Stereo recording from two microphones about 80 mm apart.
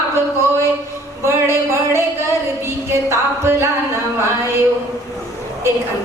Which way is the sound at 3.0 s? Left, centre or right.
Right.